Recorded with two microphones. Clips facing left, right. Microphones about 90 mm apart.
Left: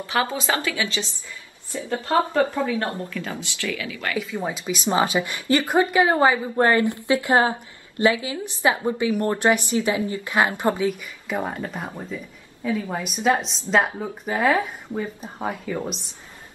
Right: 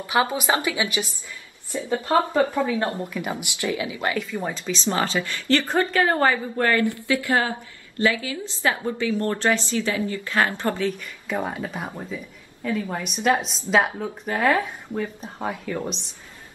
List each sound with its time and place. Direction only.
0.0 s speech: 20° right (ahead or behind)
4.4 s a woman's voice: 10° left (ahead or behind)